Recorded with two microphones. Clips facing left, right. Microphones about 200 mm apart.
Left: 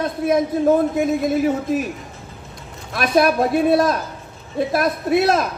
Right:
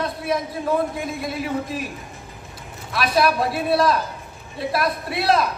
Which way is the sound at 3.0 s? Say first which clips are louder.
Left 4 dB; 50° left (ahead or behind).